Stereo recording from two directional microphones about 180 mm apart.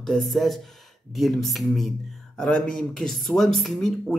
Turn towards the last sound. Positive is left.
turn(degrees=5)  # may be behind; listen again after turning